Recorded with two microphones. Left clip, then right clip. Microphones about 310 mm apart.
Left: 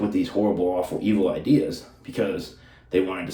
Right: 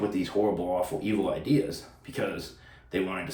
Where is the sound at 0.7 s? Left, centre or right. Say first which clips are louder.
Left 4 dB; centre.